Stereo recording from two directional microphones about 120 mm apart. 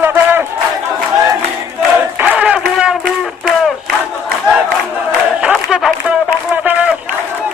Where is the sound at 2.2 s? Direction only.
10° right (ahead or behind).